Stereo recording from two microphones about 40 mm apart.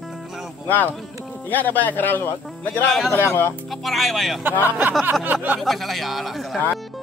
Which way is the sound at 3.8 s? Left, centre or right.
Centre.